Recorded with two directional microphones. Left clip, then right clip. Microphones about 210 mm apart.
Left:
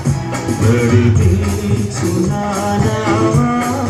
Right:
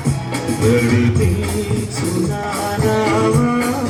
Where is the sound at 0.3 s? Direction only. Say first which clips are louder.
Right 1 dB; 55° right (ahead or behind).